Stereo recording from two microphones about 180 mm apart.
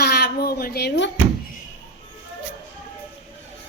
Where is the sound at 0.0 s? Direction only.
60° left (ahead or behind).